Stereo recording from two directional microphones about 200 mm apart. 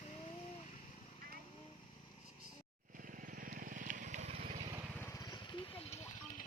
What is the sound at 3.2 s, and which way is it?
Vehicle, 45° right (ahead or behind).